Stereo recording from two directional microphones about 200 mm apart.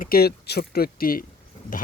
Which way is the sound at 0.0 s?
50° left (ahead or behind).